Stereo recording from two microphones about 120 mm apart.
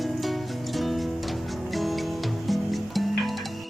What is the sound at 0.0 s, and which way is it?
Music, centre (ahead or behind).